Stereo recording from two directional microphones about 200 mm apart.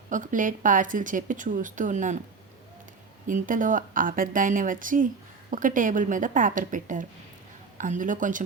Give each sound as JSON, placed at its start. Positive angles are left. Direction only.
{"t": 0.1, "sound": "speech", "side_deg": -40}
{"t": 3.2, "sound": "speech", "side_deg": -40}